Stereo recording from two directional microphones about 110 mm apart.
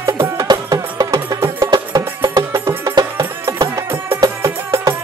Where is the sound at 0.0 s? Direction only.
25° right (ahead or behind).